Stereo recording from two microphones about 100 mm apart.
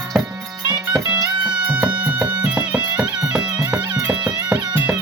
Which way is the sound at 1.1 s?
35° right (ahead or behind).